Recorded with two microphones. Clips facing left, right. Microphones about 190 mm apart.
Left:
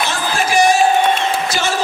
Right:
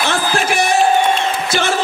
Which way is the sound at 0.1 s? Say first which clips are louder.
Right 1 dB; 55° right (ahead or behind).